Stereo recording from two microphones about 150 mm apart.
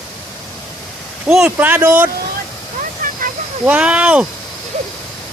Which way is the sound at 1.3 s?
10° right (ahead or behind).